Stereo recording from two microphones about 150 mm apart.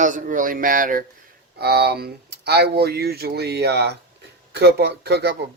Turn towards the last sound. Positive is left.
turn(degrees=-90)